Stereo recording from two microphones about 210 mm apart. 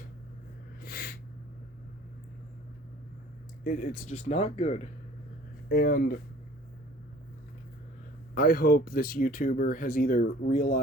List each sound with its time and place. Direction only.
0.8 s a sound: 45° left (ahead or behind)
3.6 s speech: 40° left (ahead or behind)
5.6 s speech: 45° left (ahead or behind)
8.4 s speech: 45° left (ahead or behind)